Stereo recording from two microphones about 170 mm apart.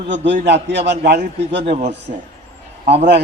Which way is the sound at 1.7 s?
40° right (ahead or behind).